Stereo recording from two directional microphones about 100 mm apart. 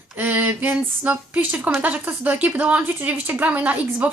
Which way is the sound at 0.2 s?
15° right (ahead or behind).